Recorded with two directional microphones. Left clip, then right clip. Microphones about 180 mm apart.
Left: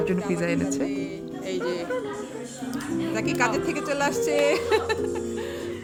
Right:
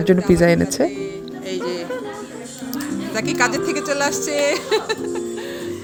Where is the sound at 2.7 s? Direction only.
5° right (ahead or behind).